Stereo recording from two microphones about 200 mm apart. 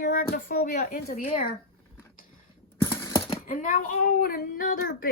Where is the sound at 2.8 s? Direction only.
15° left (ahead or behind).